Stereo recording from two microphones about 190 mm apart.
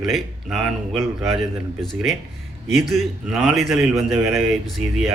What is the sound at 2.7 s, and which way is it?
A man's voice, centre (ahead or behind).